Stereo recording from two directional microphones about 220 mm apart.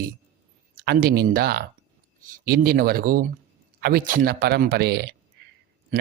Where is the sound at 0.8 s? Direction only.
45° right (ahead or behind).